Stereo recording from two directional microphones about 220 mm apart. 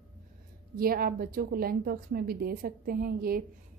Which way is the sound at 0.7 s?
40° right (ahead or behind).